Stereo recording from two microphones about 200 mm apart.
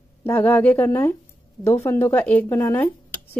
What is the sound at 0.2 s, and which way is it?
Speech, 10° left (ahead or behind).